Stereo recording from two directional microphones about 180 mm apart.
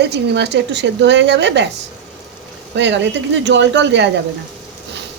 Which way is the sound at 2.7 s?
75° right (ahead or behind).